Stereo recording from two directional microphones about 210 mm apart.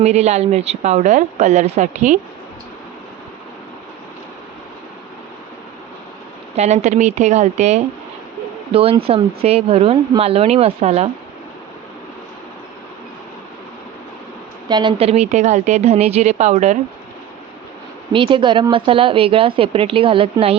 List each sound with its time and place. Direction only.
0.0 s speech: 30° right (ahead or behind)
6.6 s speech: 30° right (ahead or behind)
14.7 s speech: 20° right (ahead or behind)
18.1 s speech: 25° right (ahead or behind)